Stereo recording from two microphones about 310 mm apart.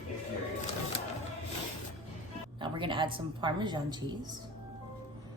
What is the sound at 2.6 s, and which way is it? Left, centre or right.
A woman's voice, centre.